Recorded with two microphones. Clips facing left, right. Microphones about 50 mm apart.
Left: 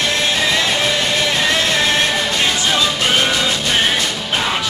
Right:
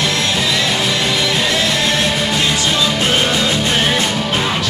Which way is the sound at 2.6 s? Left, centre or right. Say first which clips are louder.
Even; centre.